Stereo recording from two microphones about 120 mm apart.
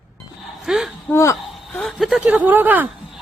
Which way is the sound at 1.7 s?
5° left (ahead or behind).